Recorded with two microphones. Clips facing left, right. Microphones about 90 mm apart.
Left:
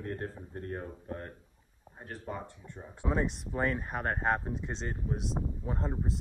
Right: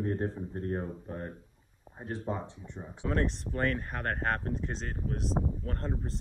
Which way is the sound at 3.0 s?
5° left (ahead or behind).